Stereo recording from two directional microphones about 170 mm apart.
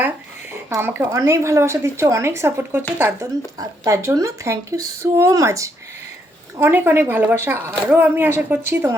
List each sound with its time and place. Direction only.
0.7 s speech: 15° right (ahead or behind)